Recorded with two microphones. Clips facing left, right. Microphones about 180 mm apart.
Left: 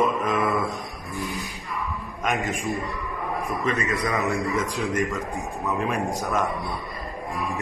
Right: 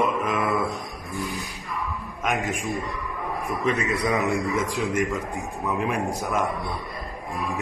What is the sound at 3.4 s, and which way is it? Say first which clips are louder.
Speech: right 2 dB; 15° right (ahead or behind).